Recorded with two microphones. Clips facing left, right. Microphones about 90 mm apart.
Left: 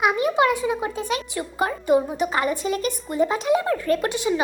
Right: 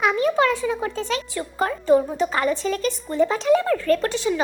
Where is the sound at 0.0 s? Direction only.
15° left (ahead or behind).